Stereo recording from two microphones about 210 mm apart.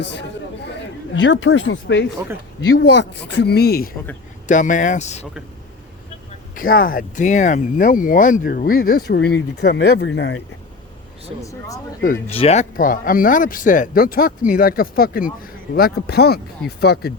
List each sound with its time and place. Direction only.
0.0 s speech: 55° left (ahead or behind)
4.4 s speech: 35° left (ahead or behind)
6.6 s speech: 45° left (ahead or behind); by 10.4 s 60° left (ahead or behind)
12.3 s speech: 30° left (ahead or behind); by 17.1 s 50° left (ahead or behind)